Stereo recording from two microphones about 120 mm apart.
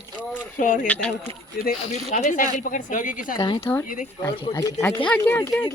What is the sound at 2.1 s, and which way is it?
A woman's voice, 90° left.